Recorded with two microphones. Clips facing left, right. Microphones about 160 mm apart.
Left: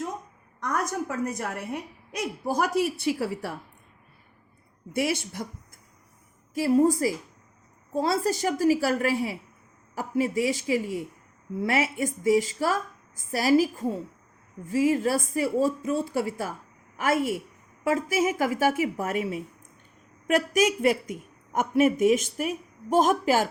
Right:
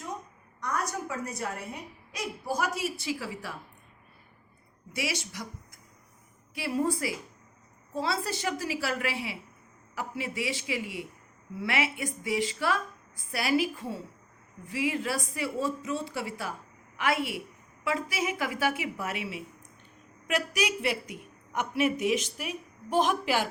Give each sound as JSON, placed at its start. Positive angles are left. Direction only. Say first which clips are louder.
{"t": 0.6, "sound": "a woman's voice", "louder": "left 4 dB", "side_deg": 50}
{"t": 4.9, "sound": "a woman's voice", "louder": "left 7 dB", "side_deg": 50}
{"t": 6.5, "sound": "a woman's voice", "louder": "left 8 dB", "side_deg": 45}